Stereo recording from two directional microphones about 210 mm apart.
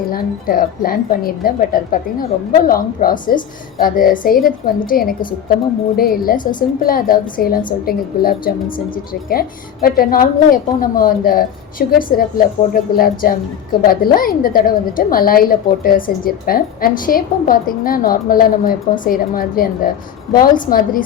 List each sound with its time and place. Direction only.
0.1 s a woman's voice: 45° left (ahead or behind)